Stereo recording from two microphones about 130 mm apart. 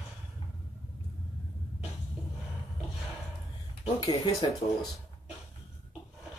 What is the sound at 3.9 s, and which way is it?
Speech, 30° left (ahead or behind).